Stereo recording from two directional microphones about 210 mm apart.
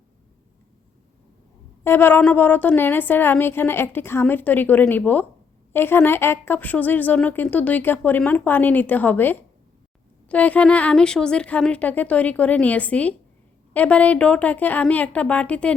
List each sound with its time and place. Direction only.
1.8 s a woman's voice: 10° left (ahead or behind)